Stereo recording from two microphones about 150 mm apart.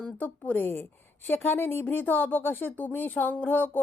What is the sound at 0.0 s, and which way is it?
Speech, 10° left (ahead or behind).